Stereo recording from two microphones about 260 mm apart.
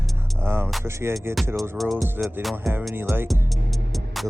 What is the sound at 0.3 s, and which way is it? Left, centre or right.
Speech, centre.